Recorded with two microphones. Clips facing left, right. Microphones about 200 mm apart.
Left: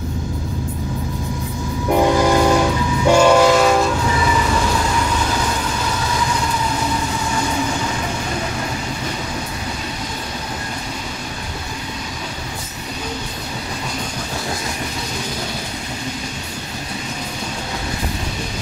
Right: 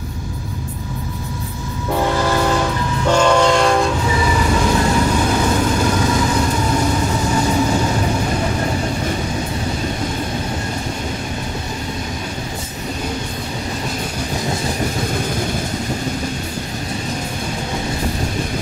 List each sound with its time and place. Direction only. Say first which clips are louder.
1.9 s train: left 3 dB; 15° left (ahead or behind)